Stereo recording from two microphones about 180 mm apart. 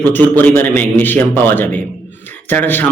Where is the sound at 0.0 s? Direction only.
10° left (ahead or behind).